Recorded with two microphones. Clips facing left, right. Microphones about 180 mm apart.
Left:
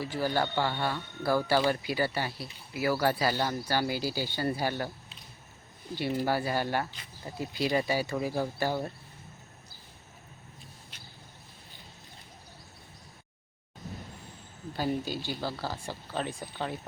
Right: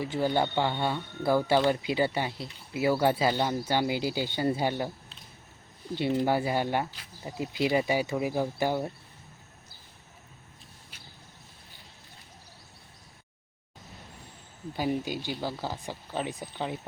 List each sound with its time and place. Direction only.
0.0 s speech: 20° right (ahead or behind)
6.0 s speech: 20° right (ahead or behind)
14.8 s speech: 15° right (ahead or behind)